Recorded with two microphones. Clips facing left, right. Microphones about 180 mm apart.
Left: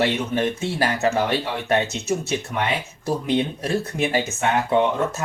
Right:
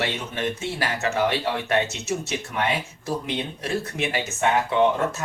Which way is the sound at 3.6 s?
40° left (ahead or behind).